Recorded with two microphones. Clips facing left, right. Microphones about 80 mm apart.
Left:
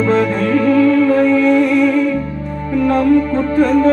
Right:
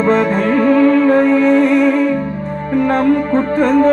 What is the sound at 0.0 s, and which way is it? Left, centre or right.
Music, right.